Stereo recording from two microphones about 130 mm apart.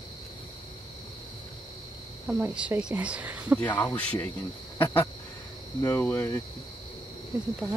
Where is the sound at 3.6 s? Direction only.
15° left (ahead or behind).